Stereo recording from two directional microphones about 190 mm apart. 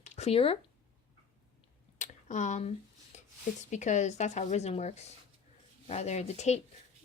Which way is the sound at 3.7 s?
40° left (ahead or behind).